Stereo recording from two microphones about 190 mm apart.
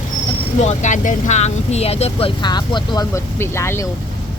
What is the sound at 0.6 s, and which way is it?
Speech, 40° left (ahead or behind).